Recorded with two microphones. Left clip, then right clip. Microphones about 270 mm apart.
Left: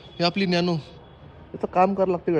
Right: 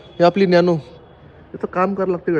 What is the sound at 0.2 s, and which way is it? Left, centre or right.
Speech, centre.